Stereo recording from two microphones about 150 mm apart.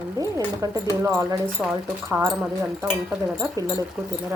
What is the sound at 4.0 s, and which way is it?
Speech, 10° right (ahead or behind).